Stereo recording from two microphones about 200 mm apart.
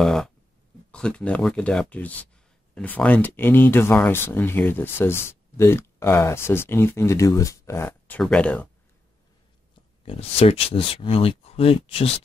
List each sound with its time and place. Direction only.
0.0 s speech: centre (ahead or behind)
10.0 s speech: 30° left (ahead or behind)